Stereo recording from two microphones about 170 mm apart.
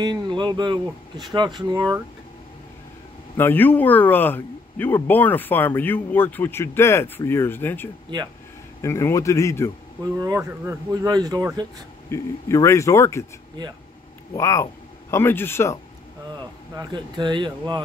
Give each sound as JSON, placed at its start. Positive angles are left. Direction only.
{"t": 0.0, "sound": "speech", "side_deg": -25}
{"t": 3.3, "sound": "a man's voice", "side_deg": 10}
{"t": 10.1, "sound": "speech", "side_deg": -20}
{"t": 12.1, "sound": "a man's voice", "side_deg": 15}
{"t": 14.3, "sound": "speech", "side_deg": 15}
{"t": 16.7, "sound": "speech", "side_deg": -25}